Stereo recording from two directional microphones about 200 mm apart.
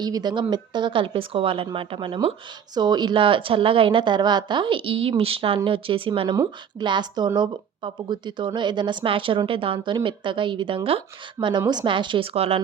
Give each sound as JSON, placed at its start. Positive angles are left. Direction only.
{"t": 0.0, "sound": "a woman's voice", "side_deg": -20}